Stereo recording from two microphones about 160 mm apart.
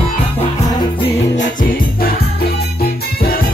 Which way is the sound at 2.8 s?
75° left (ahead or behind).